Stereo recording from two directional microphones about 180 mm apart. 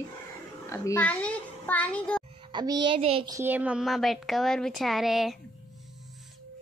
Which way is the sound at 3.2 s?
15° right (ahead or behind).